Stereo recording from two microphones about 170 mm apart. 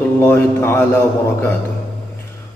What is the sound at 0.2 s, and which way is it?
Speech, 15° left (ahead or behind).